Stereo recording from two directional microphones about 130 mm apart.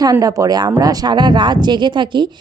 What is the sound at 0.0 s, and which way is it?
Speech, 30° right (ahead or behind).